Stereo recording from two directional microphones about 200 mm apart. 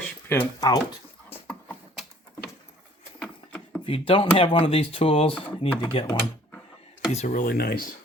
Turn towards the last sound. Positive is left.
turn(degrees=50)  # may be behind; listen again after turning